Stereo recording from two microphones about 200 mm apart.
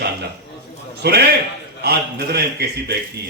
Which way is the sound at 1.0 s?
50° right (ahead or behind).